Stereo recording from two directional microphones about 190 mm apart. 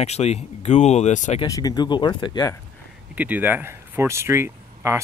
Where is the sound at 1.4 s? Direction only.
20° left (ahead or behind).